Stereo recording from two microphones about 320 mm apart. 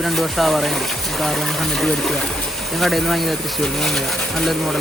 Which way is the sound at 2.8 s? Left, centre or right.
Centre.